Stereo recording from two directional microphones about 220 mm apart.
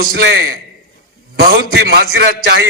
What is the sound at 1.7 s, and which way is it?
Speech, 50° right (ahead or behind).